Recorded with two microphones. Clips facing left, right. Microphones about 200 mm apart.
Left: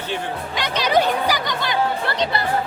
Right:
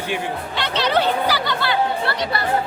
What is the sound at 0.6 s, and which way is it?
Chatter, 15° left (ahead or behind).